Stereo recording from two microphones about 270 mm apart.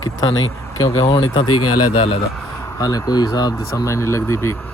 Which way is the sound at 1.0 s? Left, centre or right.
Centre.